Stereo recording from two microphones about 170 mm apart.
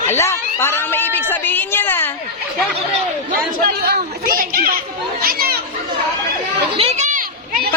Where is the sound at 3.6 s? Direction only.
65° right (ahead or behind).